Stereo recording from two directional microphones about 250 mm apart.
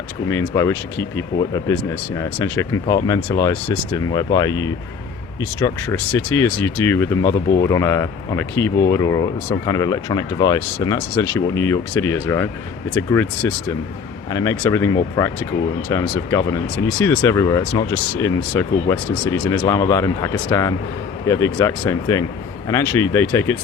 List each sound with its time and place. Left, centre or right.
0.3 s speech: centre